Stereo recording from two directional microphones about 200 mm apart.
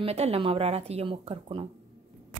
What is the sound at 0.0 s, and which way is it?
Speech, 30° right (ahead or behind).